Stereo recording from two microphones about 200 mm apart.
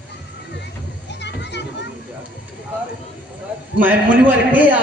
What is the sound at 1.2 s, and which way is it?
Children playing, 60° left (ahead or behind).